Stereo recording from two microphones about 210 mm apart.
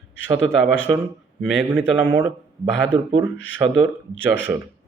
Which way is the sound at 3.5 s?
20° right (ahead or behind).